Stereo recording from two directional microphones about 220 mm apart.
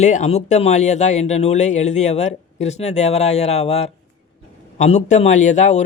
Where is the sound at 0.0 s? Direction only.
30° left (ahead or behind).